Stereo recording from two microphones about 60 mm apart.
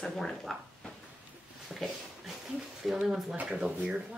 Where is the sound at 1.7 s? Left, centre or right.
Centre.